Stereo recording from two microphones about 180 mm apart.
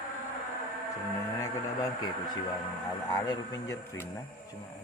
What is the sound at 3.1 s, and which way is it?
Speech, 20° left (ahead or behind).